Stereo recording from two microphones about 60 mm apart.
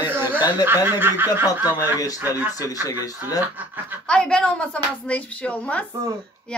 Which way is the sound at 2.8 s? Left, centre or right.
Left.